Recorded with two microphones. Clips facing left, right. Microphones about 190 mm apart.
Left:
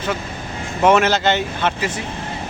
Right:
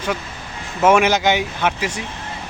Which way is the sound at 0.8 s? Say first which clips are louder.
Even; 10° right (ahead or behind).